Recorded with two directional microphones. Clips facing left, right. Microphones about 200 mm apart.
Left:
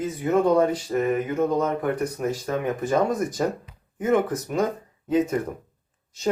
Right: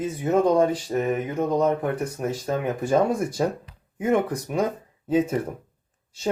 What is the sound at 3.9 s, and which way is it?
Speech, 10° right (ahead or behind).